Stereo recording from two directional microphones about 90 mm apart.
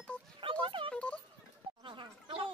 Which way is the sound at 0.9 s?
10° left (ahead or behind).